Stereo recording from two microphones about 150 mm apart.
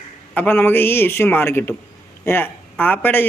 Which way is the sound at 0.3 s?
15° left (ahead or behind).